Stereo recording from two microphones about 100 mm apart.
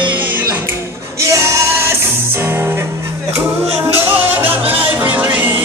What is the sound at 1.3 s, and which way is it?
Music, 30° right (ahead or behind).